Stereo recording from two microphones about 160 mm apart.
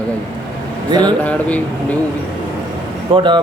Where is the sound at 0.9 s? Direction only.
25° right (ahead or behind).